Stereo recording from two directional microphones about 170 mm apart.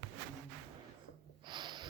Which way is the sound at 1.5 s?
25° right (ahead or behind).